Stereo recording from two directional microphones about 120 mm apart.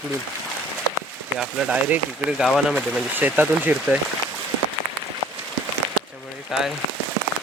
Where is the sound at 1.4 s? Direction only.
5° right (ahead or behind).